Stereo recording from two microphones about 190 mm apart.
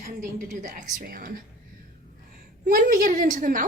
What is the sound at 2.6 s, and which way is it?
A woman's voice, 45° right (ahead or behind).